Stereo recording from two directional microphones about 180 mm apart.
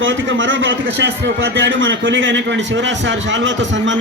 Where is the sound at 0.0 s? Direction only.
90° right.